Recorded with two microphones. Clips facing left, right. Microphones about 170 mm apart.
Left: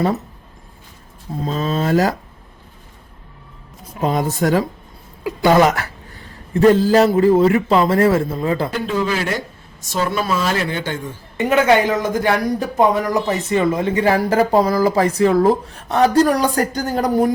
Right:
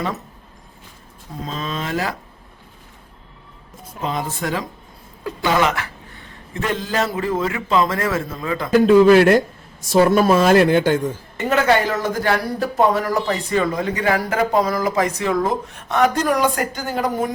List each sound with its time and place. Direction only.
1.5 s speech: 40° left (ahead or behind)
4.0 s speech: 40° left (ahead or behind)
8.7 s speech: 60° right (ahead or behind)
10.0 s speech: 50° right (ahead or behind)
11.3 s speech: 15° left (ahead or behind); by 17.3 s 35° left (ahead or behind)